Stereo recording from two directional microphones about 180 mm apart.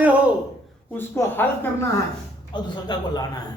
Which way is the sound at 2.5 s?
25° left (ahead or behind).